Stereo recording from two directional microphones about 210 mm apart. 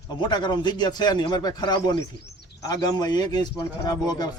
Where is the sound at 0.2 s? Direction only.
20° left (ahead or behind).